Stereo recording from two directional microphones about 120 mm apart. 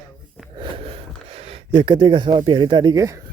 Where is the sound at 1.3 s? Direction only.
55° right (ahead or behind); by 3.2 s 25° right (ahead or behind).